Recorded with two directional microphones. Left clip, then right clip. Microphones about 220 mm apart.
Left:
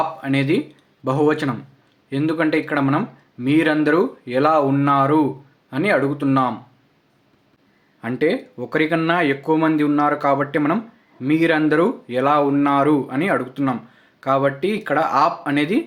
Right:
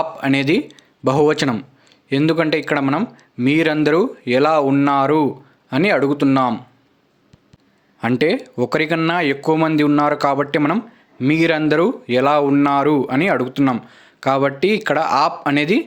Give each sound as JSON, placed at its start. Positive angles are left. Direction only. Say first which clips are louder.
{"t": 0.2, "sound": "speech", "louder": "right 3 dB", "side_deg": -45}
{"t": 8.0, "sound": "speech", "louder": "right 3 dB", "side_deg": -45}